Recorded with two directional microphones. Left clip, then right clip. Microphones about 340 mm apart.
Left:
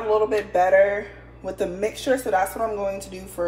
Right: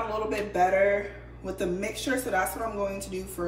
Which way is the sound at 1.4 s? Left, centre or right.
Centre.